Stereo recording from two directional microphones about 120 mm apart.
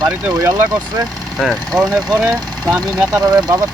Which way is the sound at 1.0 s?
Centre (ahead or behind).